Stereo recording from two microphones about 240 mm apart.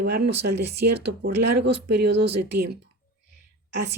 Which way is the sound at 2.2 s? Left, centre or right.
Right.